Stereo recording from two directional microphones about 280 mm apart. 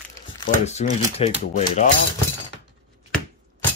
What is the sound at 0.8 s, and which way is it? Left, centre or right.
Speech, left.